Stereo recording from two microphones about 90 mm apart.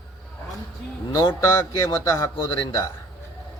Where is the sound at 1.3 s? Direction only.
30° left (ahead or behind).